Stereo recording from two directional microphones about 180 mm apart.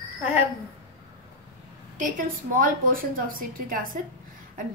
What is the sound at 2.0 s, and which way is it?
A woman's voice, 50° right (ahead or behind).